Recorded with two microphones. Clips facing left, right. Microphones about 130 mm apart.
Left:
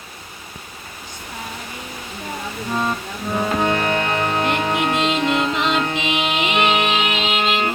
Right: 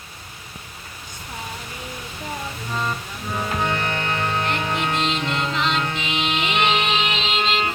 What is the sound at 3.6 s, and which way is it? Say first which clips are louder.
Music: left 5 dB; 45° left (ahead or behind).